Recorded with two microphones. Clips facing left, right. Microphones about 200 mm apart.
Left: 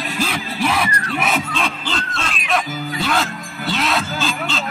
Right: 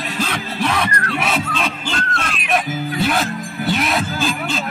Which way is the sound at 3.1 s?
15° right (ahead or behind).